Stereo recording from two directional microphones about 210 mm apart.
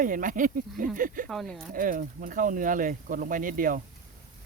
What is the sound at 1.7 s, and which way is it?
Speech, 40° right (ahead or behind).